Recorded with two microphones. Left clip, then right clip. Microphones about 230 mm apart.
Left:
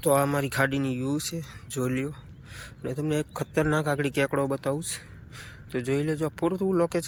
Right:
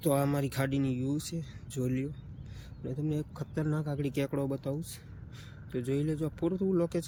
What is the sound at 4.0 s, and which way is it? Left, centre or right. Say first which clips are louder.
A man's voice: left 8 dB; centre.